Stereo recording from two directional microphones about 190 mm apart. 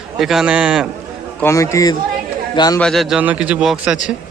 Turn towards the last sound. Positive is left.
turn(degrees=-5)  # may be behind; listen again after turning